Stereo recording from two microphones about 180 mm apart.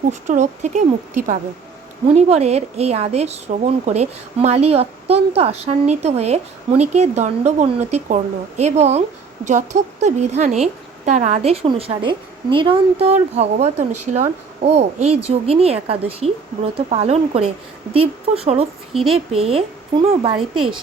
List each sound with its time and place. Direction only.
0.1 s a woman's voice: 40° right (ahead or behind)